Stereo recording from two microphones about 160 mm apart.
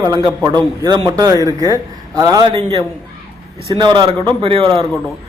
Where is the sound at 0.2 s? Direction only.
25° right (ahead or behind).